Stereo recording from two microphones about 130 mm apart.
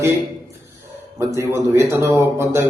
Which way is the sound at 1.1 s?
20° right (ahead or behind).